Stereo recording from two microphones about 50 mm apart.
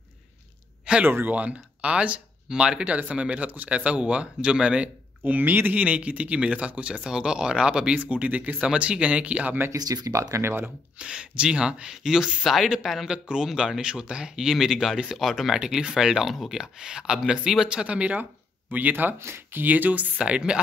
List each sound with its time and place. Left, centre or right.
1.0 s speech: right
1.3 s speech: right
5.2 s speech: right
9.7 s speech: right
11.0 s speech: centre
18.7 s speech: right
19.1 s speech: right
19.5 s speech: right
20.2 s speech: centre